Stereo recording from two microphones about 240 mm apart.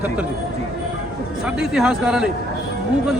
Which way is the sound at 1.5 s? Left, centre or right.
Centre.